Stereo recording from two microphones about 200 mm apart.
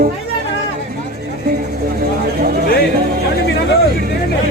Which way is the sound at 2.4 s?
45° right (ahead or behind).